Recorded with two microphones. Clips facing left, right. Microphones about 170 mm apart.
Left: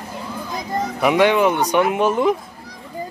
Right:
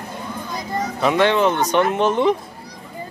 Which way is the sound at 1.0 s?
10° left (ahead or behind).